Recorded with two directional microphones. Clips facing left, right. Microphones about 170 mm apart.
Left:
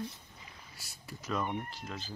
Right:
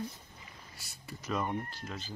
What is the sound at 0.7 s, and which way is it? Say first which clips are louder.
Speech: right 1 dB; centre (ahead or behind).